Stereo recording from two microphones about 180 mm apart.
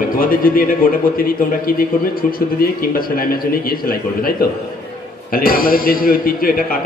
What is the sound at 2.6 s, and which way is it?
Speech, 55° left (ahead or behind).